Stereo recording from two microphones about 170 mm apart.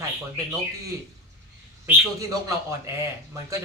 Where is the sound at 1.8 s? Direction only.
20° right (ahead or behind).